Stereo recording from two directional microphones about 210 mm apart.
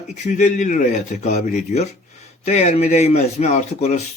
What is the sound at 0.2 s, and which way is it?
Speech, 35° left (ahead or behind).